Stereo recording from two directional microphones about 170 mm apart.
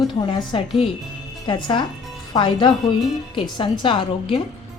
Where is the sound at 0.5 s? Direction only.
30° left (ahead or behind).